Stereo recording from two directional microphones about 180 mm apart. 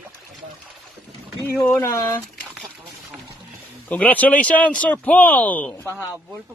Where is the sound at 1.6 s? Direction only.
15° left (ahead or behind).